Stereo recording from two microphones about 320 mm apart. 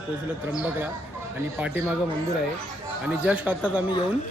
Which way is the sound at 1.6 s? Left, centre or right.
Centre.